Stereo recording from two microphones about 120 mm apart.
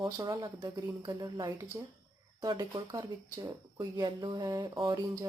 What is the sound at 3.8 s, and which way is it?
Speech, 40° right (ahead or behind).